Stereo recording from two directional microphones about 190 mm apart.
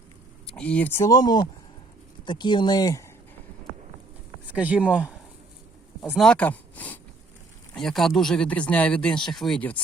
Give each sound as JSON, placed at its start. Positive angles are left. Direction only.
{"t": 0.4, "sound": "speech", "side_deg": 5}
{"t": 4.5, "sound": "speech", "side_deg": -5}
{"t": 6.0, "sound": "a sound", "side_deg": 0}
{"t": 7.7, "sound": "speech", "side_deg": 0}